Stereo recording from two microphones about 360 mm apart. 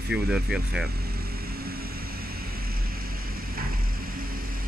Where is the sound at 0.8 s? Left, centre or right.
Right.